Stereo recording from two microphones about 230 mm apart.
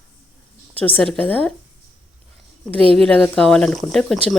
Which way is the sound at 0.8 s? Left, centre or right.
Centre.